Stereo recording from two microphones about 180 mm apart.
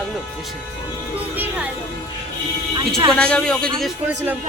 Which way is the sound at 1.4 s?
10° right (ahead or behind).